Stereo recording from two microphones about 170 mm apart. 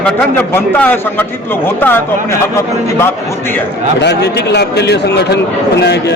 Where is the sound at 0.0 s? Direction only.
10° left (ahead or behind).